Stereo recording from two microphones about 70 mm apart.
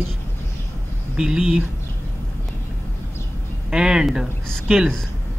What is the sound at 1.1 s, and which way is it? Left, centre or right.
Speech, centre.